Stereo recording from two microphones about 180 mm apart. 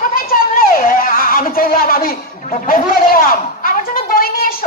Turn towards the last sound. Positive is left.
turn(degrees=55)  # may be behind; listen again after turning